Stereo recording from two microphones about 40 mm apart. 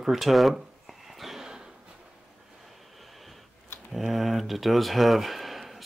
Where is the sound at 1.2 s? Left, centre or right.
Centre.